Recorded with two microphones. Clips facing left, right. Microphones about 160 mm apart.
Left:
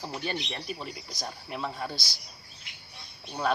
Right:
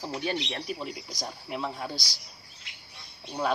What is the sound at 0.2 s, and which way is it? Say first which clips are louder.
Speech: right 3 dB; centre (ahead or behind).